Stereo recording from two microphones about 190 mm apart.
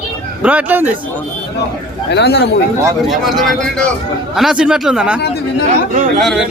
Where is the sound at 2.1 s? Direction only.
60° left (ahead or behind).